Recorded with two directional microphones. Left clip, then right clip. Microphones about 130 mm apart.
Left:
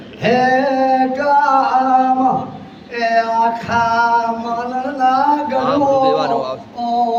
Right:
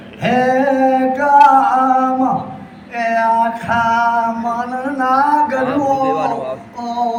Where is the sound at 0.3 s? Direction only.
40° left (ahead or behind).